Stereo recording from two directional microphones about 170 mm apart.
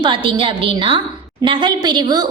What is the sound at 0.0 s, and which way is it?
A woman's voice, 30° right (ahead or behind).